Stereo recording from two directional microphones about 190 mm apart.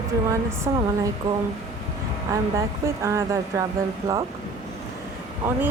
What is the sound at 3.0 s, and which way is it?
Speech, 15° right (ahead or behind).